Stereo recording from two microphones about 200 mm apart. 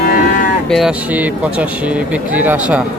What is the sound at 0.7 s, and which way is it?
Speech, 5° right (ahead or behind).